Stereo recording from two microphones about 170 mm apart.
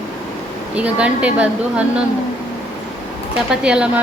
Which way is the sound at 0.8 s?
5° right (ahead or behind).